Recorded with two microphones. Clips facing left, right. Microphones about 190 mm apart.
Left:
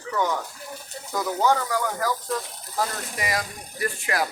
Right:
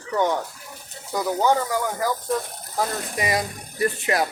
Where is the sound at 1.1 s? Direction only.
15° right (ahead or behind).